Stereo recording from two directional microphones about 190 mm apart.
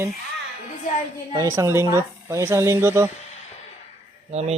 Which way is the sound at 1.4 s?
15° right (ahead or behind).